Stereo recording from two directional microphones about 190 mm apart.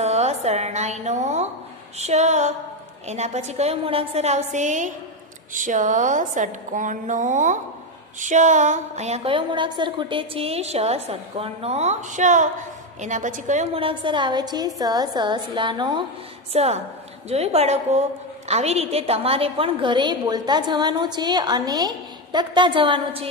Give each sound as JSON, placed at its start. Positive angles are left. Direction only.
{"t": 0.0, "sound": "a woman's voice", "side_deg": -35}
{"t": 16.5, "sound": "a woman's voice", "side_deg": -35}